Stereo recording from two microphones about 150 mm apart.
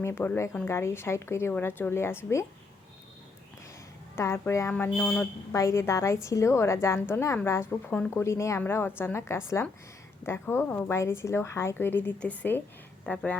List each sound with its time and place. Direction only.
0.0 s speech: 15° left (ahead or behind)
4.1 s speech: 15° left (ahead or behind)
5.5 s a woman's voice: 20° left (ahead or behind)